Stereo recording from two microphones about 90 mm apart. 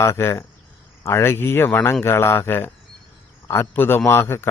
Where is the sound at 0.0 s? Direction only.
30° left (ahead or behind).